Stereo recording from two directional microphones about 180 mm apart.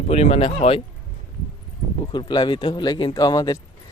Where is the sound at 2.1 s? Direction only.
25° left (ahead or behind).